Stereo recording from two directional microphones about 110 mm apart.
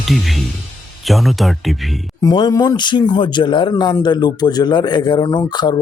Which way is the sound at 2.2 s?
45° left (ahead or behind).